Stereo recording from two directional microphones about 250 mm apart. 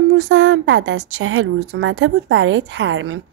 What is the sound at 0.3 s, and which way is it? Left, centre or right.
A woman's voice, right.